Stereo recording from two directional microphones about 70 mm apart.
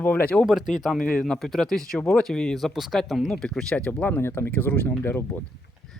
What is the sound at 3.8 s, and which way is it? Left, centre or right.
Speech, left.